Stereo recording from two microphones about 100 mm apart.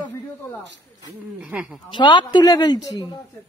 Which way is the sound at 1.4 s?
10° right (ahead or behind).